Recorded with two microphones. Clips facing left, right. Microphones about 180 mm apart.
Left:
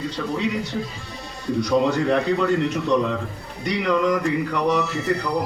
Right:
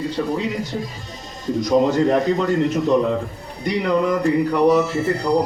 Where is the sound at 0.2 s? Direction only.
30° right (ahead or behind).